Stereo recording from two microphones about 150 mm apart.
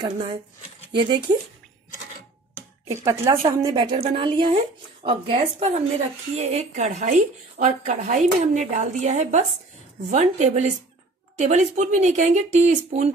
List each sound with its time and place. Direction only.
1.3 s speech: 30° right (ahead or behind)
2.9 s speech: 20° right (ahead or behind)
3.4 s a woman's voice: 30° right (ahead or behind); by 13.1 s 50° right (ahead or behind)